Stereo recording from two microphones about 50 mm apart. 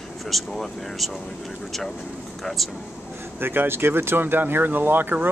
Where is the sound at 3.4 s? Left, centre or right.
Right.